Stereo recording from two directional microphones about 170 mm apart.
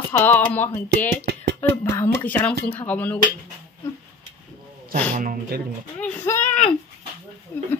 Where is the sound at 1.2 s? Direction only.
90° right.